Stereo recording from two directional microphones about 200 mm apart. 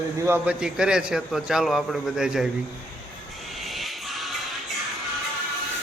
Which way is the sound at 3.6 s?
Centre (ahead or behind).